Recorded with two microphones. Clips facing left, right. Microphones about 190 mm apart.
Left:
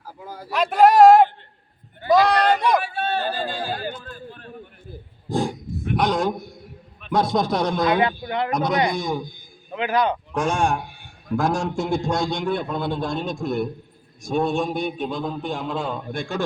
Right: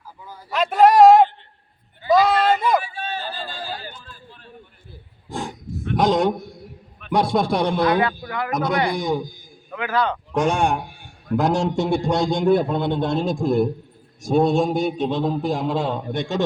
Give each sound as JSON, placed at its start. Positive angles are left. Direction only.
{"t": 0.5, "sound": "a sound", "side_deg": 0}
{"t": 2.8, "sound": "a sound", "side_deg": 60}
{"t": 5.3, "sound": "wild animals", "side_deg": 35}
{"t": 6.0, "sound": "a man's voice", "side_deg": -20}
{"t": 7.0, "sound": "a man's voice", "side_deg": -5}
{"t": 7.9, "sound": "speech", "side_deg": 20}
{"t": 9.0, "sound": "a man's voice", "side_deg": -10}
{"t": 9.7, "sound": "a man's voice", "side_deg": 15}
{"t": 10.3, "sound": "a man's voice", "side_deg": -15}
{"t": 12.4, "sound": "a man's voice", "side_deg": -40}
{"t": 12.6, "sound": "a man's voice", "side_deg": -20}